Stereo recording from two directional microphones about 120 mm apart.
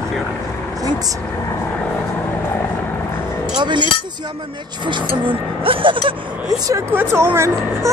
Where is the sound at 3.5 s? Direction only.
40° right (ahead or behind).